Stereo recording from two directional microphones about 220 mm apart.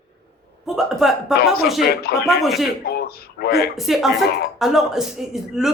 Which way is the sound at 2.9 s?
45° left (ahead or behind).